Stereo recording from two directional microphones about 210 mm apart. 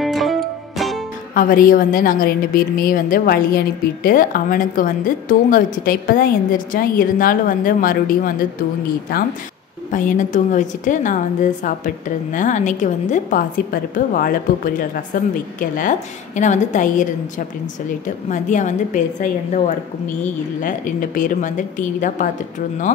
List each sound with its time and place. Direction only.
0.0 s music: centre (ahead or behind)
1.3 s a woman's voice: 40° left (ahead or behind)
9.8 s a woman's voice: 40° left (ahead or behind)
20.6 s a woman's voice: 40° left (ahead or behind)